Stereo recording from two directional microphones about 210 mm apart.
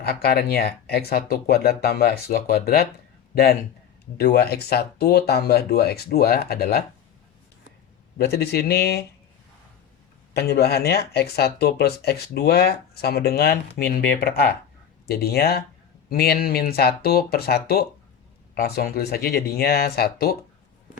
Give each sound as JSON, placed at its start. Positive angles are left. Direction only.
{"t": 0.0, "sound": "speech", "side_deg": 50}
{"t": 8.2, "sound": "speech", "side_deg": 50}
{"t": 10.3, "sound": "speech", "side_deg": 50}